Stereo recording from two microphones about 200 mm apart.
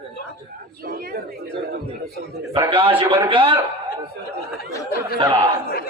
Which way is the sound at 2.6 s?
25° right (ahead or behind).